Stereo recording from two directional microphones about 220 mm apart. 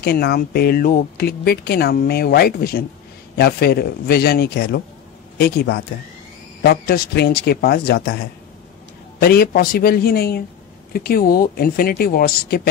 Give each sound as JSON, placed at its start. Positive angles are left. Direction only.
{"t": 0.0, "sound": "speech", "side_deg": 45}
{"t": 9.2, "sound": "speech", "side_deg": 45}